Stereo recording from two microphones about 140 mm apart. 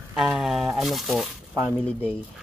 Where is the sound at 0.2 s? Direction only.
5° right (ahead or behind).